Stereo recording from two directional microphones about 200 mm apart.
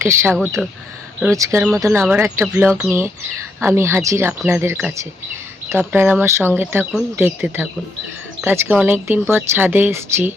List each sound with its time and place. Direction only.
0.0 s speech: 10° right (ahead or behind)
0.3 s speech: centre (ahead or behind)
1.2 s speech: 15° right (ahead or behind)